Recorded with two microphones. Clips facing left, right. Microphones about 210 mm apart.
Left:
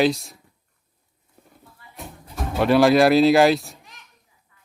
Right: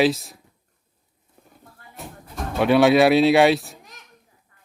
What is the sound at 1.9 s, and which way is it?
Speech, centre (ahead or behind).